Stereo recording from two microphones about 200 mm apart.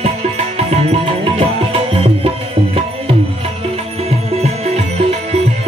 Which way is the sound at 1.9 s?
30° right (ahead or behind).